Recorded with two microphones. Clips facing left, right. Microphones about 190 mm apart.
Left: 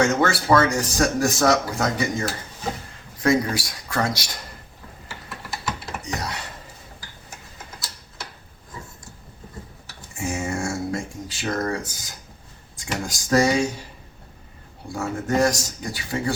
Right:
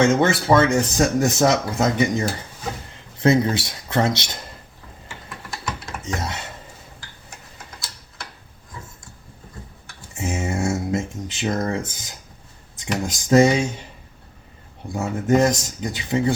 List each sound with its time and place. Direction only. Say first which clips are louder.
0.0 s speech: right 3 dB; 20° right (ahead or behind)
5.0 s typing: even; 5° left (ahead or behind)
6.1 s dishes: right 2 dB; 25° right (ahead or behind)
10.2 s a sound: right 2 dB; 20° right (ahead or behind)
12.7 s speech: right 4 dB; 20° right (ahead or behind)
14.9 s speech: right 4 dB; 20° right (ahead or behind)